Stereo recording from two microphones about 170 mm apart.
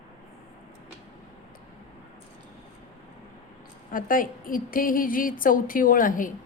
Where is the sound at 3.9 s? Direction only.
55° left (ahead or behind).